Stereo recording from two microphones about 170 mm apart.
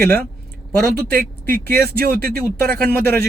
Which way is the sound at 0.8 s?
65° right (ahead or behind).